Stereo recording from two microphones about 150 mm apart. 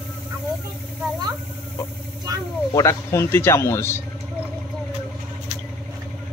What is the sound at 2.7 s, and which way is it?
Speech, 20° left (ahead or behind).